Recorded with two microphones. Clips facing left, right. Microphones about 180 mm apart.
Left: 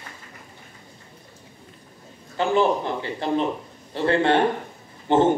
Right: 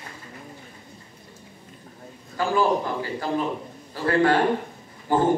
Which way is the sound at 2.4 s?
25° left (ahead or behind).